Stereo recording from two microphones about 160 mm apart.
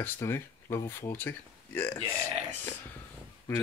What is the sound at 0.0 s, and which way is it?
Speech, 15° left (ahead or behind).